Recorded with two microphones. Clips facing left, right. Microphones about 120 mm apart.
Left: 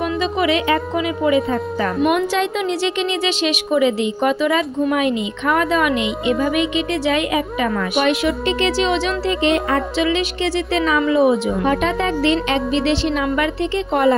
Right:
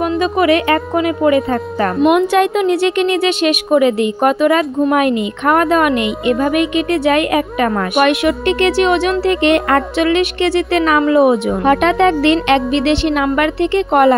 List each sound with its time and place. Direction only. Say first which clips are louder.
0.0 s a woman's voice: right 5 dB; 50° right (ahead or behind)